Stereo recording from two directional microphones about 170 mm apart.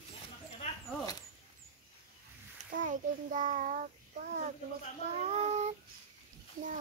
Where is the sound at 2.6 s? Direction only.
50° right (ahead or behind).